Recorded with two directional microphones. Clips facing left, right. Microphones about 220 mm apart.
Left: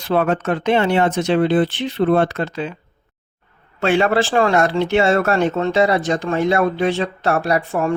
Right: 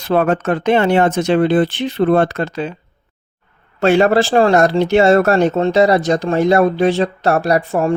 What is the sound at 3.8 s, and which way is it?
Speech, 40° right (ahead or behind).